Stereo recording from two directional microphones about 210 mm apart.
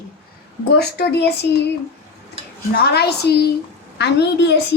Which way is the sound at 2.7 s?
50° left (ahead or behind).